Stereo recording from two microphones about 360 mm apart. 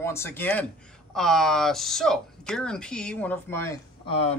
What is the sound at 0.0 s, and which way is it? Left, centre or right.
Speech, centre.